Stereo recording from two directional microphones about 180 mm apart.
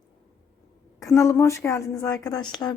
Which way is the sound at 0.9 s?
15° left (ahead or behind).